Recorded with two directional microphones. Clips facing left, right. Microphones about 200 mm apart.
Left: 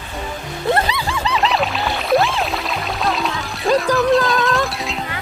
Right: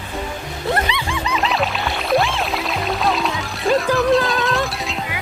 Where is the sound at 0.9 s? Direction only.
35° left (ahead or behind).